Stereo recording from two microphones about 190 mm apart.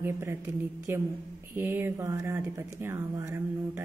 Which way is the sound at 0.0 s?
15° right (ahead or behind).